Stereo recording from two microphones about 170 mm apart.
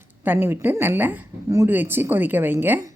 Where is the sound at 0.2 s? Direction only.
10° right (ahead or behind).